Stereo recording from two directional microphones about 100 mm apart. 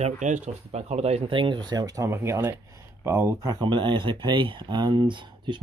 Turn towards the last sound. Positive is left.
turn(degrees=-50)  # may be behind; listen again after turning